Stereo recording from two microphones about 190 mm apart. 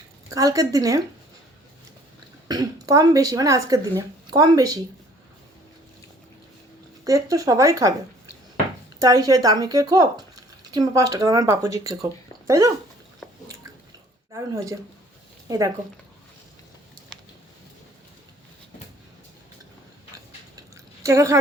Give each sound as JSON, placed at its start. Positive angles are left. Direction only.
{"t": 0.3, "sound": "speech", "side_deg": -15}
{"t": 2.5, "sound": "speech", "side_deg": -20}
{"t": 7.0, "sound": "speech", "side_deg": -20}
{"t": 9.0, "sound": "speech", "side_deg": -20}
{"t": 14.3, "sound": "speech", "side_deg": -15}
{"t": 17.1, "sound": "a sound", "side_deg": 5}
{"t": 21.0, "sound": "speech", "side_deg": -15}